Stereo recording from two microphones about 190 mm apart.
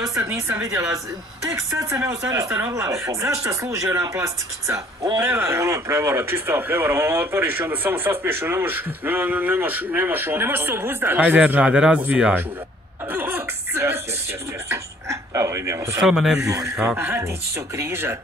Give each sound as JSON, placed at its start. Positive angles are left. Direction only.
{"t": 0.0, "sound": "speech", "side_deg": -15}
{"t": 13.1, "sound": "music", "side_deg": -10}
{"t": 14.7, "sound": "a sound", "side_deg": -15}
{"t": 16.0, "sound": "a man's voice", "side_deg": 0}
{"t": 16.3, "sound": "speech", "side_deg": -15}